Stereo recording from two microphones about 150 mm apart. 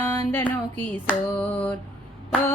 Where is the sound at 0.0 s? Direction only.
15° left (ahead or behind).